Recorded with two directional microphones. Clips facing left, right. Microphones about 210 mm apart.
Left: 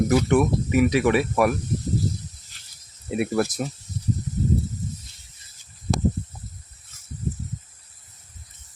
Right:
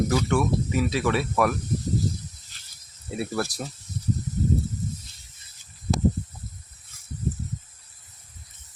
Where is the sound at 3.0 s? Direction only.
20° left (ahead or behind).